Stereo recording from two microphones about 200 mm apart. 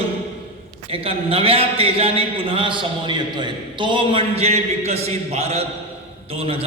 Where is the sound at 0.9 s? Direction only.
30° right (ahead or behind).